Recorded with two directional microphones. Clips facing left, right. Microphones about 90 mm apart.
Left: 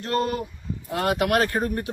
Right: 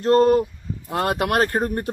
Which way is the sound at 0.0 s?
35° right (ahead or behind).